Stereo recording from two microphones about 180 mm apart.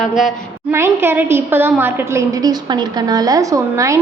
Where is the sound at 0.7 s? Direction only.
15° right (ahead or behind).